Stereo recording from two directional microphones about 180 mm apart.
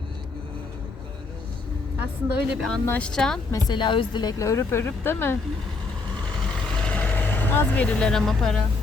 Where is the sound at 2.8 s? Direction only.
10° left (ahead or behind).